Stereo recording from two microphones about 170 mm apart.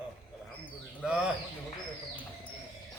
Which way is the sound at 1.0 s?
5° right (ahead or behind).